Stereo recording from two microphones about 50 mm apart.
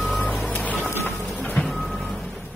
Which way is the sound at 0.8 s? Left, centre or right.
Left.